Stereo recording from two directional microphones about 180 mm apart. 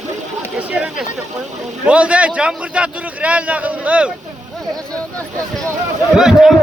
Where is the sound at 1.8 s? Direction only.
5° right (ahead or behind).